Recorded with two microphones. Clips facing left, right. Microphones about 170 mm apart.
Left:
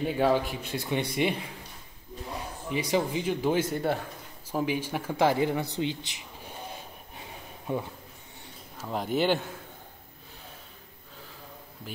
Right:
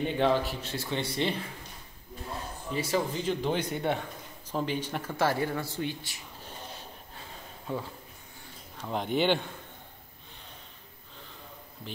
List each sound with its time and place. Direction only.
0.0 s speech: 5° left (ahead or behind)
2.7 s speech: 15° left (ahead or behind)
7.2 s a sound: 15° left (ahead or behind)
8.7 s speech: 5° left (ahead or behind)